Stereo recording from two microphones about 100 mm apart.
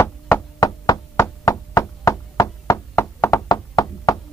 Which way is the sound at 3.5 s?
40° left (ahead or behind).